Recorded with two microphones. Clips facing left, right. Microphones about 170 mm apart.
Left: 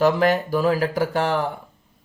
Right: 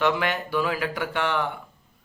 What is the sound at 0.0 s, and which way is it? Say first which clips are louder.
Speech: left 6 dB; 40° left (ahead or behind).